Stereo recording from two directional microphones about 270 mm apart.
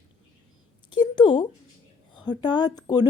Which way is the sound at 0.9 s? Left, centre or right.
Centre.